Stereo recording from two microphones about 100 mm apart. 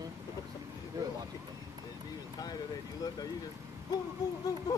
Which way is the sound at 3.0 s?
35° left (ahead or behind).